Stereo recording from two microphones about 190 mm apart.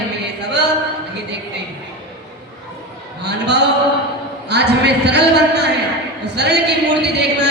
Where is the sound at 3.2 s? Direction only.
60° right (ahead or behind).